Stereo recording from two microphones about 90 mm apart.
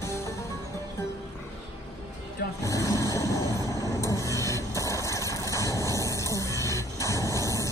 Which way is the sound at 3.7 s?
35° left (ahead or behind).